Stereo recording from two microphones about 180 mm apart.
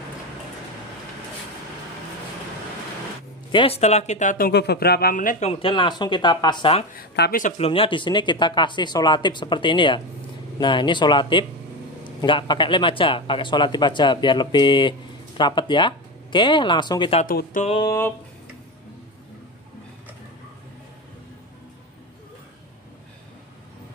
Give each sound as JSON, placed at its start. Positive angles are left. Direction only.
{"t": 3.5, "sound": "speech", "side_deg": 30}
{"t": 4.5, "sound": "speech", "side_deg": 65}
{"t": 5.5, "sound": "a man's voice", "side_deg": 30}
{"t": 6.9, "sound": "speech", "side_deg": 55}
{"t": 7.5, "sound": "a man's voice", "side_deg": 30}